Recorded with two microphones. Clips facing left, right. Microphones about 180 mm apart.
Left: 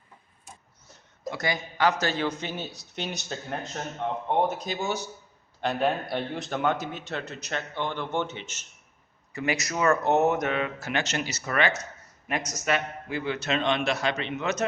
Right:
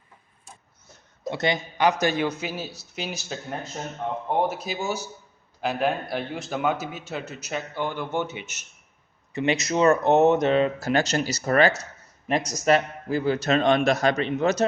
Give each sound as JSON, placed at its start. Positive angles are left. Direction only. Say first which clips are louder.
{"t": 1.3, "sound": "speech", "louder": "right 4 dB", "side_deg": -25}
{"t": 1.9, "sound": "a man's voice", "louder": "right 4 dB", "side_deg": -15}
{"t": 9.3, "sound": "a man's voice", "louder": "right 5 dB", "side_deg": -20}